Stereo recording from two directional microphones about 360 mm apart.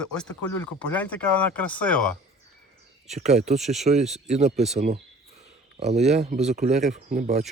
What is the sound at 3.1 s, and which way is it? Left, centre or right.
Speech, centre.